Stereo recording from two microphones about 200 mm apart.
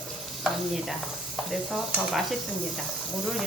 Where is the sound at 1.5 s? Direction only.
Centre (ahead or behind).